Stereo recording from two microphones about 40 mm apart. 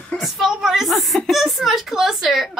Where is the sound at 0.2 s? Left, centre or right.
Centre.